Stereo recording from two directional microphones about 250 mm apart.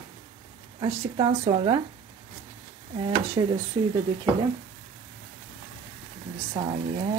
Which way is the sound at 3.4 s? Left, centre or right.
Centre.